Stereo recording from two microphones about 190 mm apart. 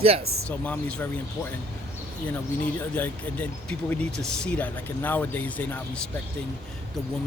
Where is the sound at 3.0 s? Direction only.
5° left (ahead or behind).